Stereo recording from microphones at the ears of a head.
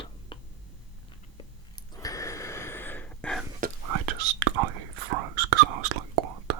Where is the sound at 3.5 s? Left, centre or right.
Right.